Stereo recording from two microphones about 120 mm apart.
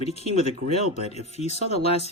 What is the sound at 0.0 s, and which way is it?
Speech, 60° left (ahead or behind).